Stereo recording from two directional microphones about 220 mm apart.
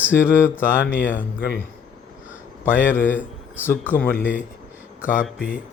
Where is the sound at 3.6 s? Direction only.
10° left (ahead or behind).